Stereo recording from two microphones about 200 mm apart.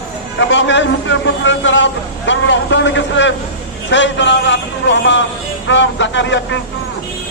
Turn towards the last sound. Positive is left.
turn(degrees=65)  # may be behind; listen again after turning